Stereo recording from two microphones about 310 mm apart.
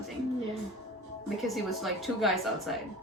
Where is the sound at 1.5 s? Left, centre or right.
Centre.